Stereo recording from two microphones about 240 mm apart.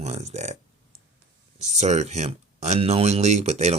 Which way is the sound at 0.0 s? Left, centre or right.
Right.